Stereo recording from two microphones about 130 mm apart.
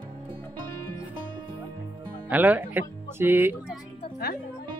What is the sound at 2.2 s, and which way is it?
Speech, 15° right (ahead or behind).